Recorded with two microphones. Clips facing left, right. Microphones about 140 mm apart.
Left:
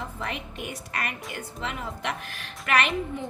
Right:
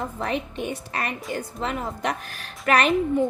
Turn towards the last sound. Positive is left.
turn(degrees=-40)  # may be behind; listen again after turning